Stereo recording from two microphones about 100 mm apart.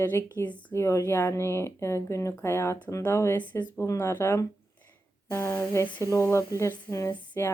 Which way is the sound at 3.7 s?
30° left (ahead or behind).